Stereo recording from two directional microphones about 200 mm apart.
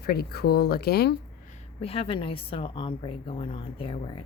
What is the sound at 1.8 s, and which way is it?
A woman's voice, 30° left (ahead or behind).